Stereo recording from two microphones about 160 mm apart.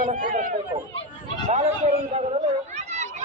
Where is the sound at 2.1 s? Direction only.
45° right (ahead or behind).